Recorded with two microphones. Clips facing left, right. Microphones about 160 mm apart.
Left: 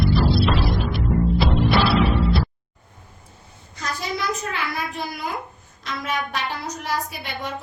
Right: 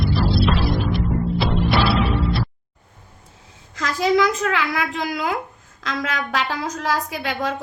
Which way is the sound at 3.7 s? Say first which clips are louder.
Right 10 dB; 90° right.